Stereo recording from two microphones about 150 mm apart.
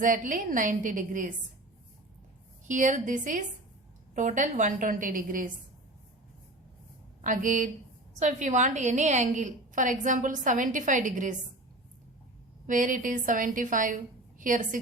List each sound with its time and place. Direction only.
0.0 s a woman's voice: 60° right (ahead or behind)
2.6 s a woman's voice: 60° right (ahead or behind)
7.2 s a woman's voice: 60° right (ahead or behind)
12.6 s a woman's voice: 60° right (ahead or behind)